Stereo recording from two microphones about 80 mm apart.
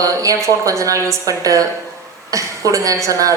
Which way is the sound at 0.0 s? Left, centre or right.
Right.